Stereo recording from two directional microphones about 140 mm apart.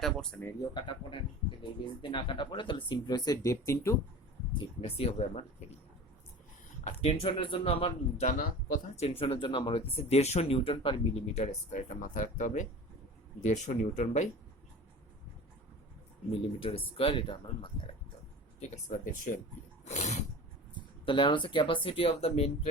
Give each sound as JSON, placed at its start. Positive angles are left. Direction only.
{"t": 0.0, "sound": "speech", "side_deg": 5}
{"t": 0.7, "sound": "speech", "side_deg": 35}
{"t": 4.5, "sound": "speech", "side_deg": 45}
{"t": 7.0, "sound": "speech", "side_deg": 45}
{"t": 11.7, "sound": "speech", "side_deg": 65}
{"t": 16.3, "sound": "speech", "side_deg": 40}
{"t": 18.9, "sound": "speech", "side_deg": 65}
{"t": 19.8, "sound": "a sound", "side_deg": 55}
{"t": 20.7, "sound": "speech", "side_deg": 35}